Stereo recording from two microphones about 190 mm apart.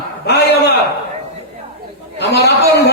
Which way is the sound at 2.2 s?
65° left (ahead or behind).